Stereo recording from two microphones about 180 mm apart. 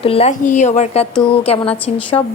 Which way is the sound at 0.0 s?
35° left (ahead or behind).